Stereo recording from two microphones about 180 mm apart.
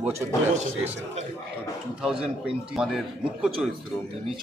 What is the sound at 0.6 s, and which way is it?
Speech, 40° right (ahead or behind).